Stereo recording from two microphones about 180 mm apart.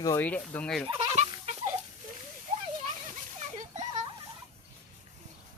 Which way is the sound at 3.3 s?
40° right (ahead or behind).